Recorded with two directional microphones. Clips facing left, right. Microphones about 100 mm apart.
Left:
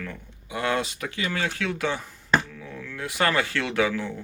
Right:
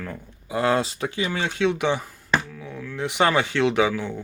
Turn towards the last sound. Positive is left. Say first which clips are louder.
# right 4 dB
turn(degrees=-15)  # may be behind; listen again after turning